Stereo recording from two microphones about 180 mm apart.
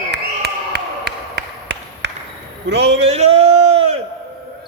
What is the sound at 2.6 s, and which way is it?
Speech, 70° right (ahead or behind).